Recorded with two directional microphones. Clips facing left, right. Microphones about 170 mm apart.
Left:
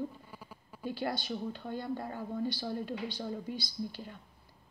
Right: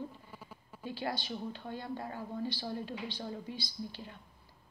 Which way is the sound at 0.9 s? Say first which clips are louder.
Left 3 dB; 45° left (ahead or behind).